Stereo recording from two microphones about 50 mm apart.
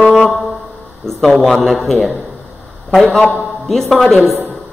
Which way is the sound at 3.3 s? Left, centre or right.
Centre.